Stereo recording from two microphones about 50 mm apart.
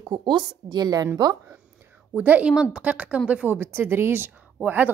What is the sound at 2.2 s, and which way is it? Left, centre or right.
Speech, right.